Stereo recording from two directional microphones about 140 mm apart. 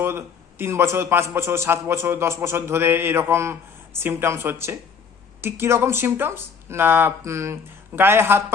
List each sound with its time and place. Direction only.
0.0 s a man's voice: 20° right (ahead or behind)